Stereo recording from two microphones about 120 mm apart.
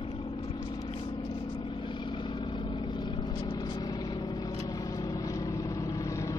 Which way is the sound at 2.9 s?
40° left (ahead or behind).